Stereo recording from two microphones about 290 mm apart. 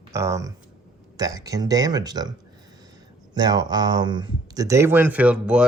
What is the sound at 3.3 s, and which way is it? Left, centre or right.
Speech, centre.